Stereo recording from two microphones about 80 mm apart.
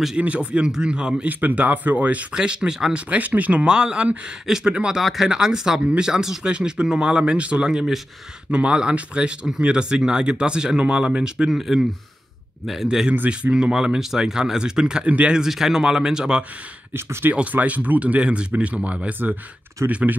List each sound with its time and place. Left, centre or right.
0.2 s speech: centre
16.9 s speech: right
17.4 s speech: centre